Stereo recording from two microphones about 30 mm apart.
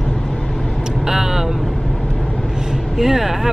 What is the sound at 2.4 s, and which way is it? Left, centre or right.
Vehicle, centre.